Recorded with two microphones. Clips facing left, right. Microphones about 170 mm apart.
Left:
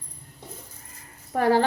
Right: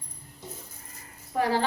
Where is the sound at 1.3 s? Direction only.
55° left (ahead or behind).